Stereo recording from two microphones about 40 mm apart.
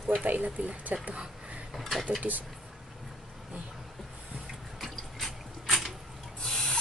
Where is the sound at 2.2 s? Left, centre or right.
Right.